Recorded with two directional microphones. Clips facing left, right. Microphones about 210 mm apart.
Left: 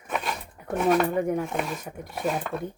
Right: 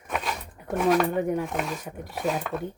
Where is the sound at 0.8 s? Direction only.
Centre (ahead or behind).